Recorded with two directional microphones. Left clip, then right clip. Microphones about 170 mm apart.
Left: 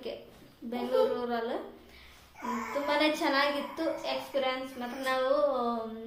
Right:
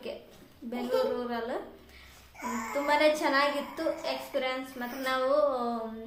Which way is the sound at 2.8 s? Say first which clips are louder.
Right 4 dB; centre (ahead or behind).